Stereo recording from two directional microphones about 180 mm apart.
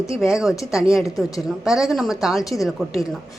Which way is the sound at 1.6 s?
5° right (ahead or behind).